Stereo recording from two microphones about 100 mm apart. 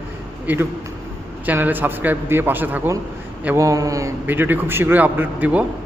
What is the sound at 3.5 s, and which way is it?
Speech, 35° right (ahead or behind).